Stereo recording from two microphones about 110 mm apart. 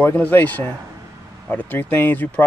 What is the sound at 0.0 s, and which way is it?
Speech, 15° left (ahead or behind).